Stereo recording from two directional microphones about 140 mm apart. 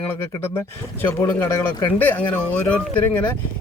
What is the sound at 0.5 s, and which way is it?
Speech, 15° left (ahead or behind).